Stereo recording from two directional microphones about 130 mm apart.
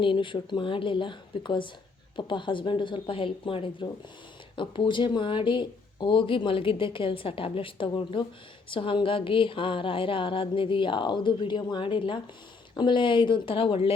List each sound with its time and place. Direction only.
0.0 s speech: 40° left (ahead or behind)